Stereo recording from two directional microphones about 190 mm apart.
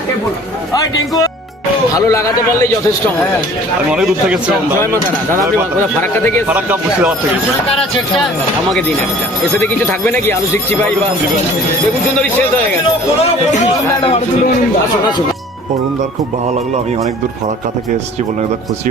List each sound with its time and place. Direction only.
0.7 s a man's voice: 20° left (ahead or behind)
3.8 s a man's voice: 5° right (ahead or behind)
6.0 s a man's voice: 10° left (ahead or behind)
6.5 s speech: 10° right (ahead or behind)
10.1 s a man's voice: 10° left (ahead or behind)